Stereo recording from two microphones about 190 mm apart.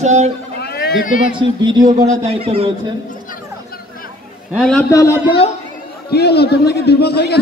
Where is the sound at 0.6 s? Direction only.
55° left (ahead or behind).